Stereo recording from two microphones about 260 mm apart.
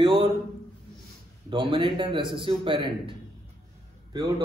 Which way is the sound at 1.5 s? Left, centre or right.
Centre.